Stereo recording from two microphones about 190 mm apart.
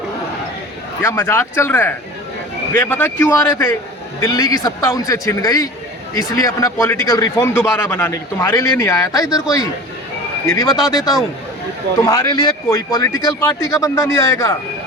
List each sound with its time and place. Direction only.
1.0 s a man's voice: 10° left (ahead or behind)